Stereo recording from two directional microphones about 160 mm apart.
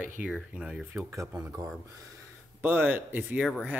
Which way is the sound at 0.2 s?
5° right (ahead or behind).